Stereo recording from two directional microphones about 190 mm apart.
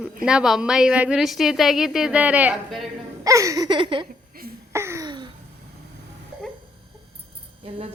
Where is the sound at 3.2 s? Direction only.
15° right (ahead or behind).